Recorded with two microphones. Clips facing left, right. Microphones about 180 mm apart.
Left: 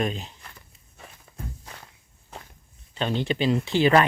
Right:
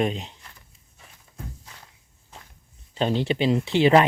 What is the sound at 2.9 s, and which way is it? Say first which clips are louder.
Speech: right 3 dB; 35° right (ahead or behind).